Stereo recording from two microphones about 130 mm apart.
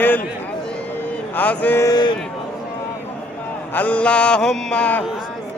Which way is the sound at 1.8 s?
30° left (ahead or behind).